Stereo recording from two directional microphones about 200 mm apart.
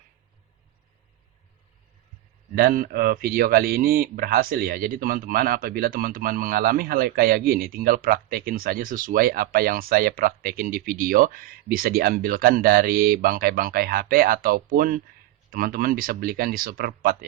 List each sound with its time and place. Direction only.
2.6 s speech: 45° right (ahead or behind)